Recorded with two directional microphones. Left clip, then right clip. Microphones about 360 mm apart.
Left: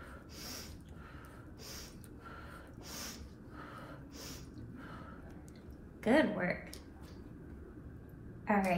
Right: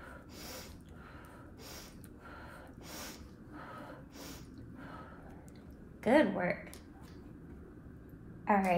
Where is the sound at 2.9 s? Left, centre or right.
Right.